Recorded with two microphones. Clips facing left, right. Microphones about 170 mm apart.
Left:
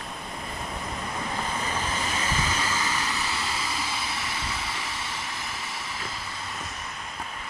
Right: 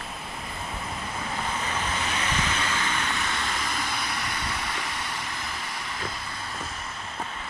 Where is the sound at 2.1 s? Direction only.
35° left (ahead or behind).